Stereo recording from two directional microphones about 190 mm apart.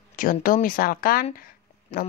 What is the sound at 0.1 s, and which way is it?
Speech, 45° left (ahead or behind).